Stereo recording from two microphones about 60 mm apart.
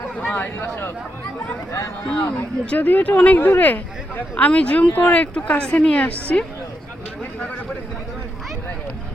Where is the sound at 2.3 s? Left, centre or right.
Centre.